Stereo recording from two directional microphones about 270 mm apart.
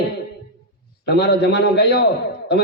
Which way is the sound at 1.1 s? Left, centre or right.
Left.